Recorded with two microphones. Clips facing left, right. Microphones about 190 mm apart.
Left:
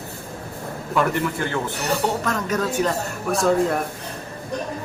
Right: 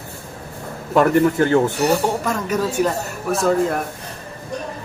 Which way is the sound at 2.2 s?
10° right (ahead or behind).